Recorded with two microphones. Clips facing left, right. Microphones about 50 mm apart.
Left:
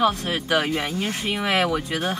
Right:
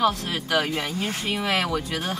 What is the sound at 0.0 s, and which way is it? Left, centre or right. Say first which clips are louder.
Speech: left 2 dB; centre.